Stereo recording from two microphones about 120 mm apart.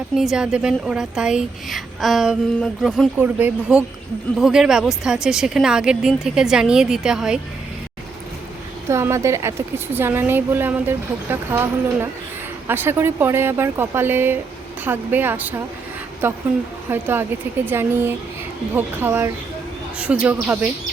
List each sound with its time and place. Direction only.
0.2 s a woman's voice: 5° right (ahead or behind)
3.2 s speech: 15° right (ahead or behind)
4.4 s a woman's voice: 5° right (ahead or behind)
8.9 s speech: 25° right (ahead or behind)